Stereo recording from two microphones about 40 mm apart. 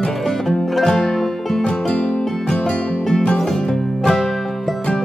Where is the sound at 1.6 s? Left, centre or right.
Left.